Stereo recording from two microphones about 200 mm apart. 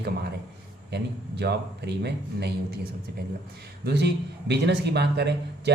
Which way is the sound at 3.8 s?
55° right (ahead or behind).